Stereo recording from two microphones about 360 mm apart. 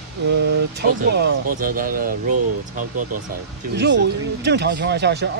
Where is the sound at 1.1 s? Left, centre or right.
Right.